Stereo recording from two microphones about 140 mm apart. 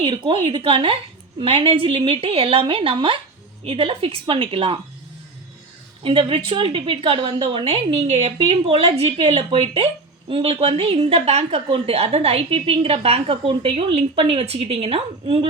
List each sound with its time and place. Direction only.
0.0 s a woman's voice: 40° right (ahead or behind)
6.0 s a woman's voice: 40° right (ahead or behind)